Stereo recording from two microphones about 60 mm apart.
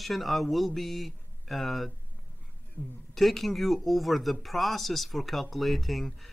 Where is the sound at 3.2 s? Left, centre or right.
Centre.